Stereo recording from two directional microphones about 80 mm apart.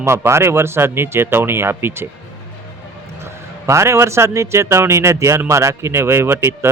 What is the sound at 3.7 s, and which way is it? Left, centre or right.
Speech, right.